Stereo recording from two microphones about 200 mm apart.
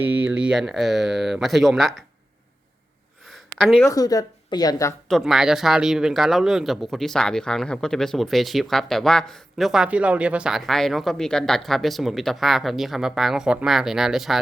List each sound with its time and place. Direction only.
0.0 s speech: 10° right (ahead or behind)
3.6 s speech: centre (ahead or behind)
3.8 s speech: 20° left (ahead or behind)
5.0 s speech: centre (ahead or behind)